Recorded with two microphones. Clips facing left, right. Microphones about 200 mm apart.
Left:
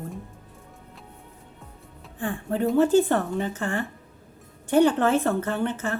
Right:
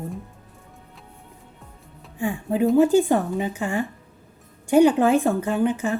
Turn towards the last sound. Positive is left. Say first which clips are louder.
# right 5 dB
turn(degrees=-10)  # may be behind; listen again after turning